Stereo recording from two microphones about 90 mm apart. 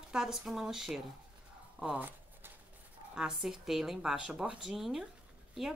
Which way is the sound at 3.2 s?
5° right (ahead or behind).